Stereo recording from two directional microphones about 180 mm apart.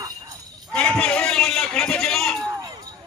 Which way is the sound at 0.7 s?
5° left (ahead or behind).